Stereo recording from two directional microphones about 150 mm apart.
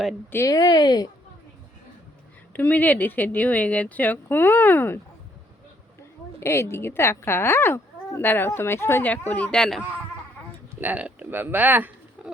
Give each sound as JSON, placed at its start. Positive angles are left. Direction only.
{"t": 0.3, "sound": "speech", "side_deg": 20}
{"t": 2.5, "sound": "speech", "side_deg": 10}
{"t": 6.4, "sound": "speech", "side_deg": 15}
{"t": 10.7, "sound": "speech", "side_deg": -10}